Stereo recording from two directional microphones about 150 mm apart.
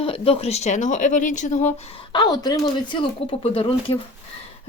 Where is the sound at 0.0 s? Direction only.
40° left (ahead or behind).